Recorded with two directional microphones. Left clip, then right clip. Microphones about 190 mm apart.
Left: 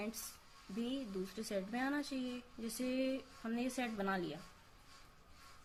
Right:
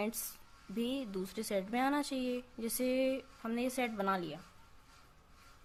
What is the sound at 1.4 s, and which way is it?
A woman's voice, 40° right (ahead or behind).